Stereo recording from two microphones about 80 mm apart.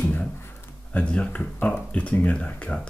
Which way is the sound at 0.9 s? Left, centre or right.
Centre.